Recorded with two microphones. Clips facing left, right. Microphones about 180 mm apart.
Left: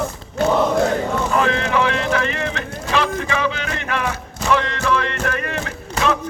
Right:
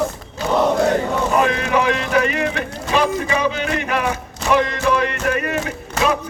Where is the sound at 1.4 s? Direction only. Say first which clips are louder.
Even; 15° right (ahead or behind).